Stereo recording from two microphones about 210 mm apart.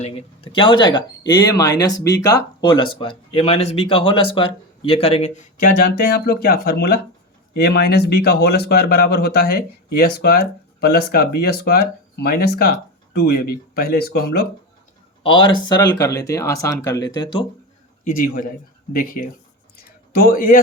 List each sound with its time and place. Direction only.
0.0 s speech: 25° left (ahead or behind); by 12.7 s 45° left (ahead or behind)
13.7 s speech: 45° left (ahead or behind)
15.2 s speech: 25° left (ahead or behind)
18.0 s a man's voice: 40° left (ahead or behind)
19.7 s a sound: 45° left (ahead or behind)